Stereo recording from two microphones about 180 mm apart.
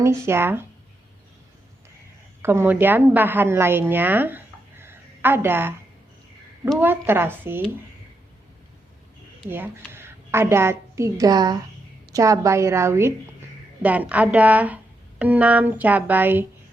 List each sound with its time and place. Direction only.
0.0 s speech: 15° right (ahead or behind)
2.4 s a woman's voice: 10° right (ahead or behind)
9.5 s a woman's voice: 10° right (ahead or behind)